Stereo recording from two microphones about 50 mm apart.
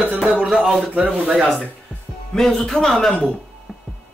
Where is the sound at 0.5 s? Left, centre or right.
Centre.